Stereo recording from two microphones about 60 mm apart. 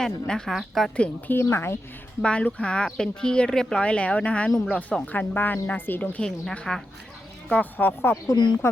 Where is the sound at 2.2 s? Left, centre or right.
Centre.